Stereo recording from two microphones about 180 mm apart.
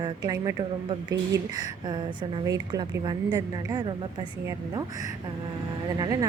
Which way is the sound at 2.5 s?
20° right (ahead or behind).